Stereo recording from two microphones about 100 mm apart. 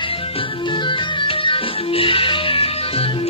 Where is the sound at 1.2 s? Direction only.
60° left (ahead or behind).